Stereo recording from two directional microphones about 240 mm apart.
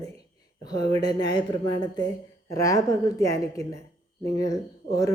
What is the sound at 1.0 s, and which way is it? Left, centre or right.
A woman's voice, centre.